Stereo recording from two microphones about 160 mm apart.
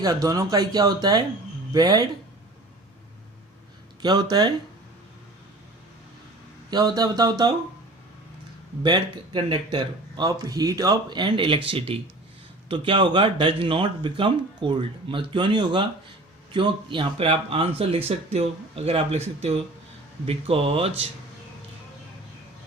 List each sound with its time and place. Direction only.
0.0 s speech: 20° right (ahead or behind)
4.0 s speech: 25° right (ahead or behind)
6.7 s speech: 25° right (ahead or behind)
8.8 s speech: 30° right (ahead or behind)